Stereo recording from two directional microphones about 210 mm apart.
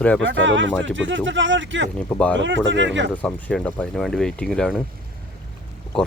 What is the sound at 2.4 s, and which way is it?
Speech, 60° right (ahead or behind).